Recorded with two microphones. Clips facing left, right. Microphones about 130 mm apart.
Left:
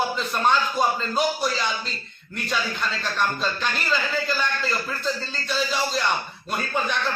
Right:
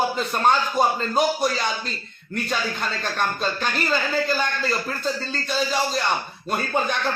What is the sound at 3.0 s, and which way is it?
Speech, 45° right (ahead or behind).